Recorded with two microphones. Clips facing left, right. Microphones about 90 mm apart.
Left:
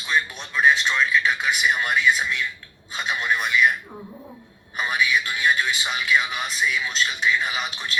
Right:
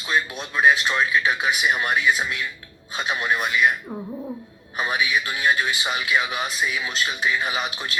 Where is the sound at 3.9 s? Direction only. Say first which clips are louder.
Right 7 dB; 25° right (ahead or behind).